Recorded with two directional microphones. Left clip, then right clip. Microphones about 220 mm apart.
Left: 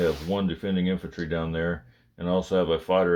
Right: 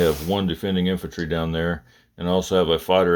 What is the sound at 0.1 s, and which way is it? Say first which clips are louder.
Speech: right 5 dB; 35° right (ahead or behind).